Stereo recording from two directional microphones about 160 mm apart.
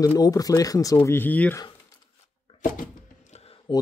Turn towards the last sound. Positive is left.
turn(degrees=30)  # may be behind; listen again after turning